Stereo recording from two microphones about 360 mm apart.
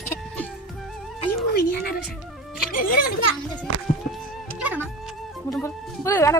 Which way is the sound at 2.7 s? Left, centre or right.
Left.